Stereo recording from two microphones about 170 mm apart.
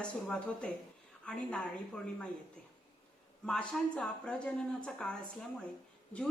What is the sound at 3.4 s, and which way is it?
Speech, 5° left (ahead or behind).